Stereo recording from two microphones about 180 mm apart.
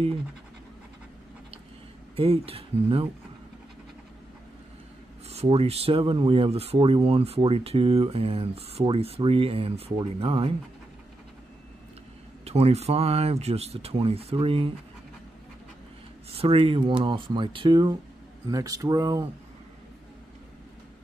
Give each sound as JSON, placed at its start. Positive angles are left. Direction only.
{"t": 2.1, "sound": "speech", "side_deg": -30}
{"t": 5.3, "sound": "speech", "side_deg": -35}
{"t": 12.4, "sound": "speech", "side_deg": -35}
{"t": 16.3, "sound": "speech", "side_deg": -30}